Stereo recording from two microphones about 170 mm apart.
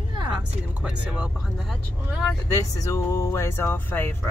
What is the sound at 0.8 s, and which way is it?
Speech, 5° right (ahead or behind).